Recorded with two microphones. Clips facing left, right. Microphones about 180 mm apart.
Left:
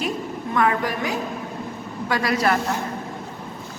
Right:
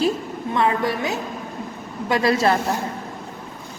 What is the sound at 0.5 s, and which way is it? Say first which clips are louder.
A woman's voice: right 1 dB; 25° right (ahead or behind).